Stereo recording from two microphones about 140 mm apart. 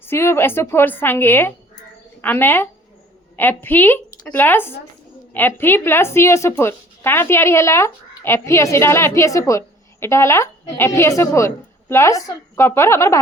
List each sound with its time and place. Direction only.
0.0 s a woman's voice: 15° left (ahead or behind)